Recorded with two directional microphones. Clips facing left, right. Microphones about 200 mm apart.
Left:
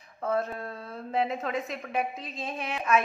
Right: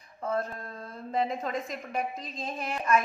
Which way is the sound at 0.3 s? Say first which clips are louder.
Left 2 dB; 5° left (ahead or behind).